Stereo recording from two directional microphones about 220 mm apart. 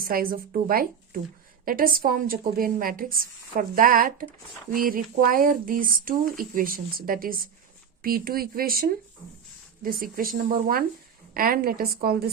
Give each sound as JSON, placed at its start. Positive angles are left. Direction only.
{"t": 0.0, "sound": "a woman's voice", "side_deg": -40}